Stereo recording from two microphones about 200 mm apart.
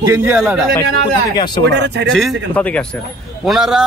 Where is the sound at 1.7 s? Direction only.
60° right (ahead or behind).